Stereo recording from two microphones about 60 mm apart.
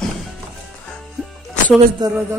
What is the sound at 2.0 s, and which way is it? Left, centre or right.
Speech, right.